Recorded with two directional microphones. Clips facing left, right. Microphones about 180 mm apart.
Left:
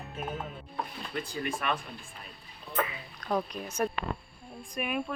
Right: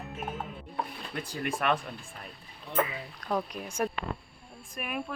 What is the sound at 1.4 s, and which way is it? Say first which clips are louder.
Speech: right 4 dB; 55° right (ahead or behind).